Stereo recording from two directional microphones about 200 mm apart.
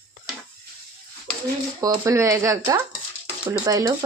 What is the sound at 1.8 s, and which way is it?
Speech, 15° right (ahead or behind).